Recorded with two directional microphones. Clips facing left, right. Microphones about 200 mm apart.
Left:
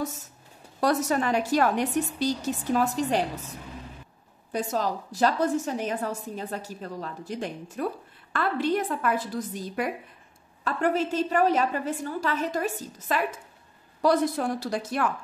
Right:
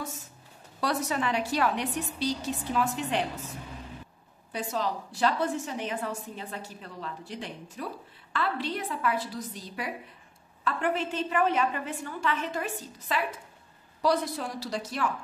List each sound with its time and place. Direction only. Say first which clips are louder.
0.7 s a woman's voice: left 5 dB; 45° left (ahead or behind)
4.5 s a woman's voice: left 4 dB; 45° left (ahead or behind)